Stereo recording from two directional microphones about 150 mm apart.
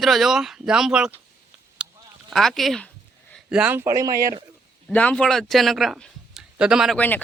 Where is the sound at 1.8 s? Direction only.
5° right (ahead or behind).